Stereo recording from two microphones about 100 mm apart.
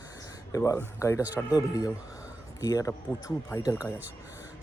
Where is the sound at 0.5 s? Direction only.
35° left (ahead or behind).